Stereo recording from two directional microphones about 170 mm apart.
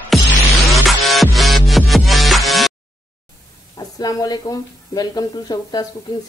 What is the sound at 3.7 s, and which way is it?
Speech, 20° left (ahead or behind).